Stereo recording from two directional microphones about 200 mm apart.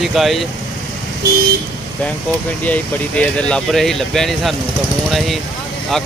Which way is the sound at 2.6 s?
5° left (ahead or behind).